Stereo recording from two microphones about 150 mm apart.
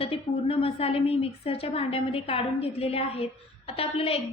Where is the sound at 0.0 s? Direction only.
40° left (ahead or behind).